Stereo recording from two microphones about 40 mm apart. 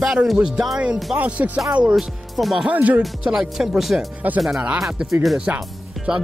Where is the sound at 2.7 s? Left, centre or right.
Right.